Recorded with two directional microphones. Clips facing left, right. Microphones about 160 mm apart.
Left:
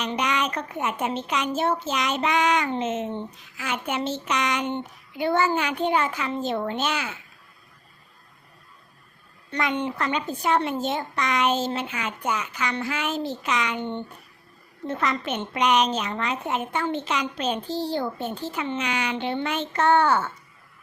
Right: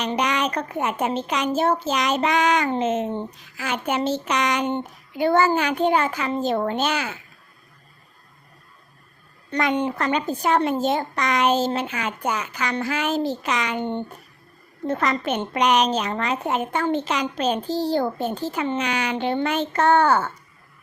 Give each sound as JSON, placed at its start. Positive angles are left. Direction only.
{"t": 0.0, "sound": "a woman's voice", "side_deg": -40}
{"t": 9.5, "sound": "a woman's voice", "side_deg": -40}